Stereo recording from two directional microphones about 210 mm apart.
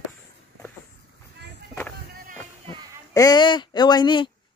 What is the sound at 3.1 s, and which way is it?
Speech, 15° left (ahead or behind).